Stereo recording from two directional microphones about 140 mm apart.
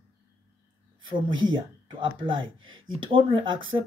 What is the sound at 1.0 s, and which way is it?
Speech, 35° right (ahead or behind).